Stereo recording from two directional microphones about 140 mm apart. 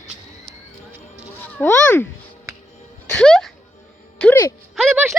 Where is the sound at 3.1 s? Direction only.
5° left (ahead or behind).